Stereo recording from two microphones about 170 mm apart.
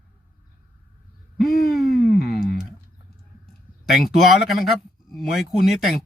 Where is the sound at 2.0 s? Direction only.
65° left (ahead or behind).